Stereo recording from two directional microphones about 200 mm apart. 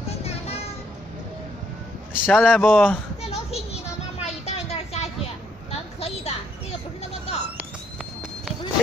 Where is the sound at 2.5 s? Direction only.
10° left (ahead or behind).